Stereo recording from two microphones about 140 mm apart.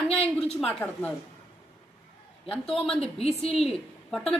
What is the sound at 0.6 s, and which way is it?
Speech, 5° left (ahead or behind).